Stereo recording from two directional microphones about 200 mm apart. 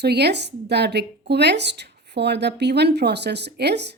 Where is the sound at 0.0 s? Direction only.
55° right (ahead or behind).